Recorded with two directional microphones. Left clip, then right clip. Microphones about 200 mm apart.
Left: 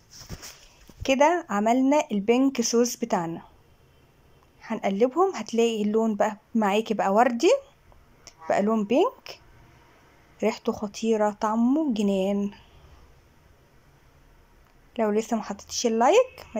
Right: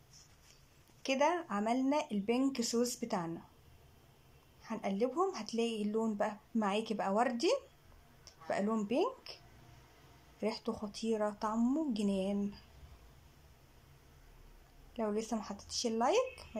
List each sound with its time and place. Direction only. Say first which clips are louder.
0.1 s a sound: left 15 dB; 35° left (ahead or behind)
1.0 s speech: left 11 dB; 20° left (ahead or behind)
4.6 s speech: left 12 dB; 20° left (ahead or behind)
10.4 s speech: left 12 dB; 15° left (ahead or behind)
15.0 s speech: left 12 dB; 15° left (ahead or behind)